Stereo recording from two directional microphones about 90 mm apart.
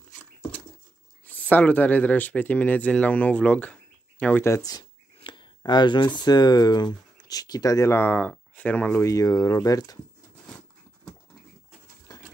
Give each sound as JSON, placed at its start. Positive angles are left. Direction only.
{"t": 1.2, "sound": "speech", "side_deg": 20}
{"t": 4.6, "sound": "speech", "side_deg": 45}
{"t": 5.2, "sound": "a sound", "side_deg": 65}
{"t": 5.6, "sound": "speech", "side_deg": 55}
{"t": 7.9, "sound": "speech", "side_deg": 20}
{"t": 9.0, "sound": "speech", "side_deg": 40}
{"t": 12.1, "sound": "a sound", "side_deg": 50}